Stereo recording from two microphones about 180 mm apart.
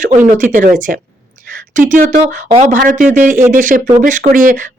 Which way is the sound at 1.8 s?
45° right (ahead or behind).